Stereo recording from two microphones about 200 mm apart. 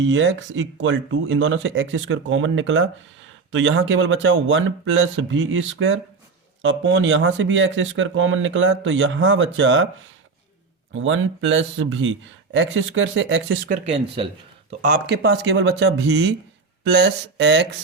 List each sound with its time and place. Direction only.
0.0 s speech: 70° right (ahead or behind)
10.9 s speech: 75° right (ahead or behind)
14.7 s speech: 40° right (ahead or behind)
15.0 s speech: 55° right (ahead or behind)